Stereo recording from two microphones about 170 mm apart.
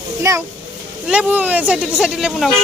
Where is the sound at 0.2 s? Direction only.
15° right (ahead or behind).